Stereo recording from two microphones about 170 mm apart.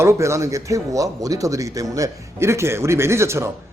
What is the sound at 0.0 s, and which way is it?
Speech, 15° right (ahead or behind).